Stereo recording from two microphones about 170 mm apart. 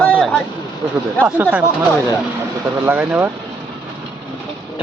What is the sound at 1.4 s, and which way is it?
Speech, 10° right (ahead or behind).